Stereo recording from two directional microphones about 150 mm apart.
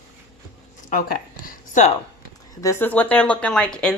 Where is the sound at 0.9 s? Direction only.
70° left (ahead or behind).